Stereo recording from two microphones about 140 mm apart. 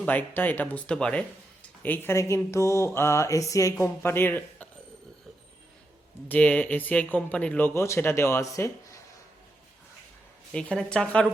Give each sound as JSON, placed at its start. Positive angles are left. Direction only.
{"t": 0.0, "sound": "speech", "side_deg": 10}
{"t": 6.2, "sound": "speech", "side_deg": 10}
{"t": 10.5, "sound": "speech", "side_deg": 5}